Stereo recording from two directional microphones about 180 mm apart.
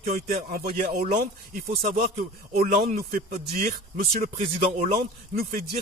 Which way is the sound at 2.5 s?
55° right (ahead or behind).